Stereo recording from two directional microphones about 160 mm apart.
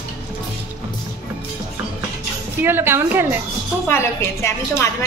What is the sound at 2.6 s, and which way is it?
Speech, 15° right (ahead or behind).